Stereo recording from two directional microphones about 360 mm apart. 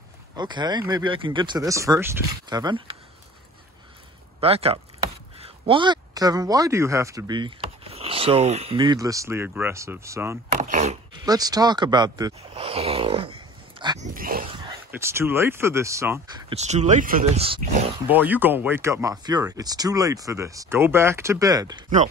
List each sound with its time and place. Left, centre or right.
0.4 s speech: centre
4.4 s speech: centre
10.5 s a sound: centre
14.1 s speech: right
14.7 s speech: centre
18.0 s speech: centre